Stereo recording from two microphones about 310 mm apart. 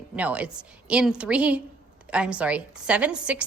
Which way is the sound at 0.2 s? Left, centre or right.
Centre.